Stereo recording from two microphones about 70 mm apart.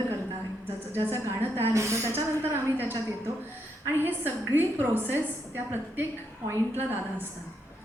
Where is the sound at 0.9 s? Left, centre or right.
Right.